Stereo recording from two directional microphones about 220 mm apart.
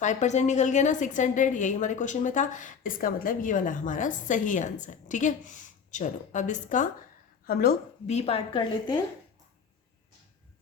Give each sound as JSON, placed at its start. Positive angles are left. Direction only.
{"t": 0.0, "sound": "a woman's voice", "side_deg": 35}
{"t": 8.0, "sound": "a woman's voice", "side_deg": 30}